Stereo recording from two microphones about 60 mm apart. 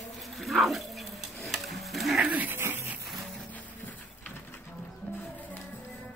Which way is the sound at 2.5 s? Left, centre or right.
Right.